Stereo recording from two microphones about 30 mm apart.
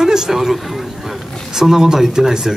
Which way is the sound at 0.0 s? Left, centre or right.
Centre.